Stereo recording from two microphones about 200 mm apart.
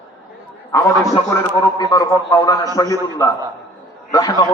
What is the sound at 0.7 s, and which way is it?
A man's voice, 15° left (ahead or behind).